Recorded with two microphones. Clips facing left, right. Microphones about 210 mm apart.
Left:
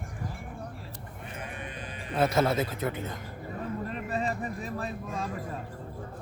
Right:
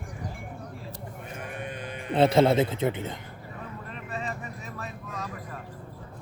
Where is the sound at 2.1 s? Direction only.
30° right (ahead or behind).